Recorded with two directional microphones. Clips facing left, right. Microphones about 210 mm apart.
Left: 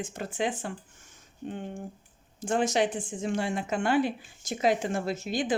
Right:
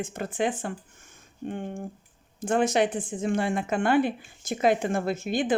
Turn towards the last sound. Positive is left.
turn(degrees=-55)  # may be behind; listen again after turning